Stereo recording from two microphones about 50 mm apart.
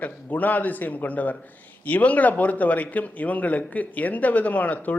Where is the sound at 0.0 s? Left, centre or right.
Left.